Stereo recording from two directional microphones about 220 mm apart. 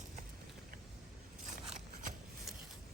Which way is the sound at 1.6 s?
30° right (ahead or behind).